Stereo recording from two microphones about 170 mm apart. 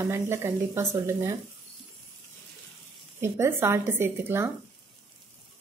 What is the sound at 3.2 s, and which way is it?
Speech, 15° right (ahead or behind).